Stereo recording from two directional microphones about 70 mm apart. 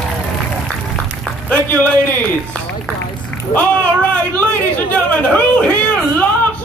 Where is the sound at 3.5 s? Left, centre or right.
Left.